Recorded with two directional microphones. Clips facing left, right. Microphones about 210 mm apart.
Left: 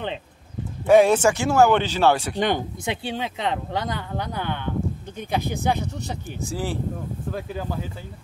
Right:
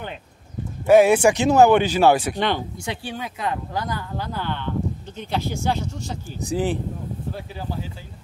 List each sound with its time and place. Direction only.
0.8 s speech: 5° right (ahead or behind)
2.3 s speech: 15° left (ahead or behind)
6.4 s speech: 20° right (ahead or behind)
7.3 s speech: 50° left (ahead or behind)